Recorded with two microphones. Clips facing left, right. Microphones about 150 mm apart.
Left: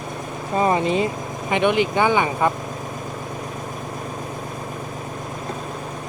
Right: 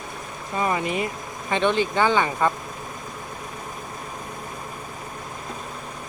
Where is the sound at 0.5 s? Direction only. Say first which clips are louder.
Left 5 dB; 30° left (ahead or behind).